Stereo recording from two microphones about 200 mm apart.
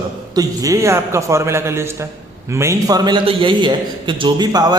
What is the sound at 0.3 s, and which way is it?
A man's voice, 15° right (ahead or behind).